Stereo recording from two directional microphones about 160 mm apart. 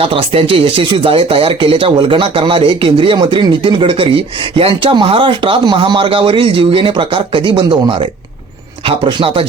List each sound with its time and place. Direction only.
0.0 s speech: 35° right (ahead or behind)